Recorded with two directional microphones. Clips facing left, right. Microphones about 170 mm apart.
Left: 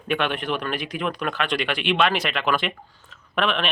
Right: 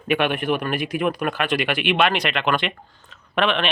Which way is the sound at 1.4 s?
5° right (ahead or behind).